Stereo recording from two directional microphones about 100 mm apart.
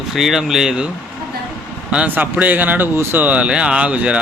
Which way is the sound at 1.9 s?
15° right (ahead or behind).